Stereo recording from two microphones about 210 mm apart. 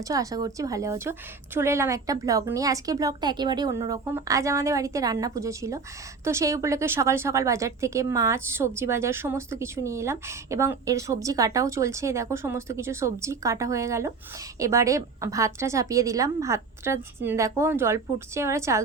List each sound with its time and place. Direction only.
0.0 s a woman's voice: 15° right (ahead or behind)